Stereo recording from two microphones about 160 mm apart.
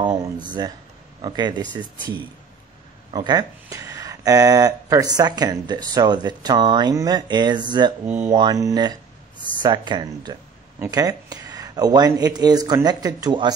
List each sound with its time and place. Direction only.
0.0 s speech: 30° right (ahead or behind)
3.1 s speech: 25° right (ahead or behind)